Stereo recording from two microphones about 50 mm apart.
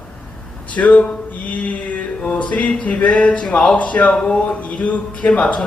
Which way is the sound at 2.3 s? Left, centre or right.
Left.